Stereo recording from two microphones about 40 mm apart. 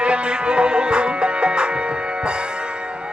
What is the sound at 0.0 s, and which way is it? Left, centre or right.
Music, right.